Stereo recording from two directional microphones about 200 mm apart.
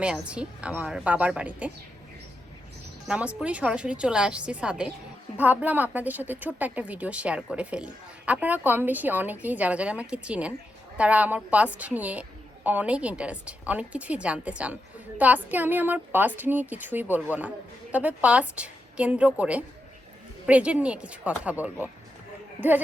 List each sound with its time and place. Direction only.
0.0 s a woman's voice: 5° right (ahead or behind)
3.1 s a woman's voice: 5° right (ahead or behind)